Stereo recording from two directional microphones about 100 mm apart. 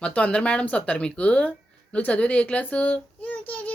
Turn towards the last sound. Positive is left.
turn(degrees=15)  # may be behind; listen again after turning